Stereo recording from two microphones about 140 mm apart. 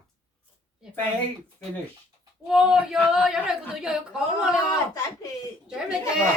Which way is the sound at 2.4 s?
5° right (ahead or behind).